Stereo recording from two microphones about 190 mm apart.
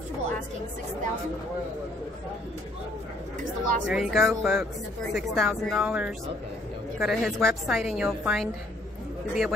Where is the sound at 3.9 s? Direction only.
Centre (ahead or behind).